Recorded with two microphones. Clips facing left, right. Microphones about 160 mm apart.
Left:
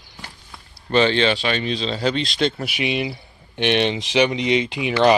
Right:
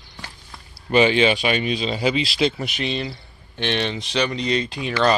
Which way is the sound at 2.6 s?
10° left (ahead or behind).